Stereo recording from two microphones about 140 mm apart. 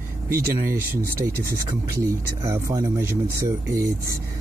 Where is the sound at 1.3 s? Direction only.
90° right.